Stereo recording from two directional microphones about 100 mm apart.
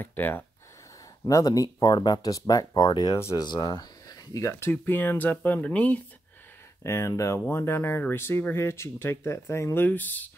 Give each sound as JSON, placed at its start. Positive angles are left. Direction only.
{"t": 0.0, "sound": "speech", "side_deg": 20}
{"t": 1.2, "sound": "speech", "side_deg": 40}
{"t": 6.8, "sound": "speech", "side_deg": 30}
{"t": 9.8, "sound": "speech", "side_deg": 15}